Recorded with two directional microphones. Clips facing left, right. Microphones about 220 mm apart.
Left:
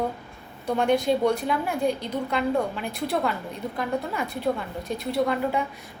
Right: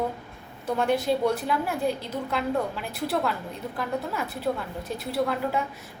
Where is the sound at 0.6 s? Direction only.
5° right (ahead or behind).